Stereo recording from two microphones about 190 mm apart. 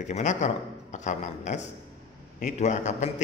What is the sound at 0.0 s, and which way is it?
A man's voice, 40° left (ahead or behind).